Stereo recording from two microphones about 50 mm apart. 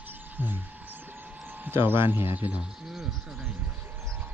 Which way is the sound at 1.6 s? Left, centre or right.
Right.